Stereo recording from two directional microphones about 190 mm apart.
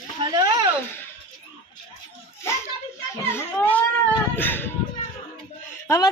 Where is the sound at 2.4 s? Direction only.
15° left (ahead or behind).